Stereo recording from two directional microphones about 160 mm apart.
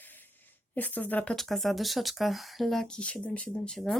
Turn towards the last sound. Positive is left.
turn(degrees=5)  # may be behind; listen again after turning